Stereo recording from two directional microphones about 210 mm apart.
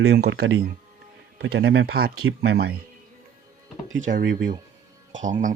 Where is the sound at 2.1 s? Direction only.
90° right.